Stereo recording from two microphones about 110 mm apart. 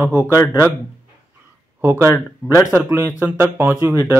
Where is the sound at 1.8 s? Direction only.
20° right (ahead or behind).